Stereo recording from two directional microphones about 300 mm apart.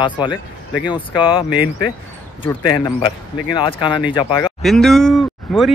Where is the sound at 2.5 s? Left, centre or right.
Centre.